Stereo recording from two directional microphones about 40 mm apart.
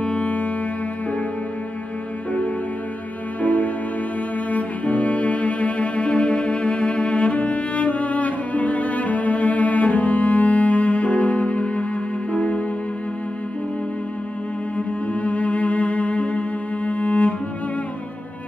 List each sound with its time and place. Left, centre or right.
0.0 s music: left
3.3 s music: left
4.5 s cello: left
12.3 s music: left
15.2 s music: left